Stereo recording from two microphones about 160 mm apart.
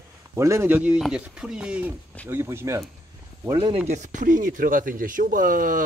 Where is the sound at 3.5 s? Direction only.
30° right (ahead or behind).